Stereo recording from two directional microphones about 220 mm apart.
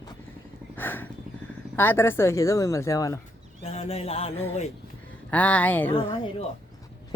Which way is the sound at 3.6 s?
30° left (ahead or behind).